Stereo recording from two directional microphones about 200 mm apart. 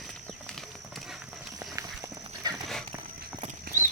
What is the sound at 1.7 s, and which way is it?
Clip-clop, 15° right (ahead or behind).